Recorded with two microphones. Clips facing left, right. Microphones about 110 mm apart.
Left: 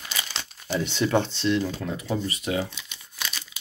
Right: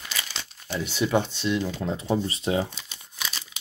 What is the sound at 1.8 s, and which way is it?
Speech, 25° right (ahead or behind).